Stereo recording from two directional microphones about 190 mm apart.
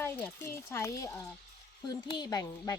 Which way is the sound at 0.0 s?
10° left (ahead or behind).